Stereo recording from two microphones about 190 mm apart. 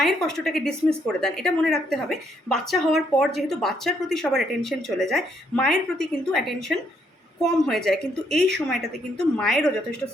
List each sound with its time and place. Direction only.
0.0 s a woman's voice: centre (ahead or behind)